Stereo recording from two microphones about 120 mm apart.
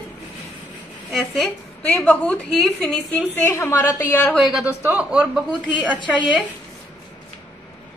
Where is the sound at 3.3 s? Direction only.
20° left (ahead or behind).